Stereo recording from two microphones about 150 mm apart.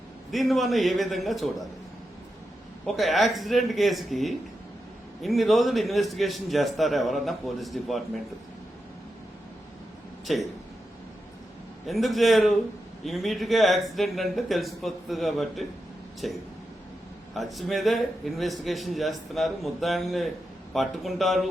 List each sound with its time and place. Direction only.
0.3 s a man's voice: centre (ahead or behind)
2.8 s a man's voice: centre (ahead or behind)
10.3 s a man's voice: centre (ahead or behind)
11.9 s a man's voice: centre (ahead or behind)